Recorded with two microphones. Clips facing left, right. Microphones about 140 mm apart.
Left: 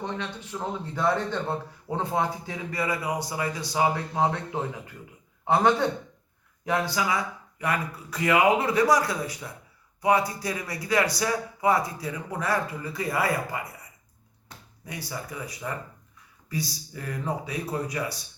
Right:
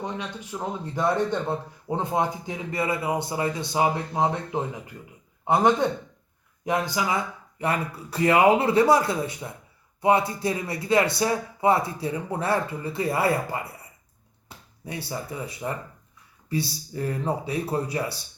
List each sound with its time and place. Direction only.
0.0 s speech: 10° right (ahead or behind)
6.7 s speech: 20° right (ahead or behind)